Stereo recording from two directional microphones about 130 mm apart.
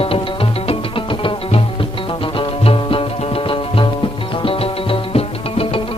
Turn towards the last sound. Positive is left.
turn(degrees=45)  # may be behind; listen again after turning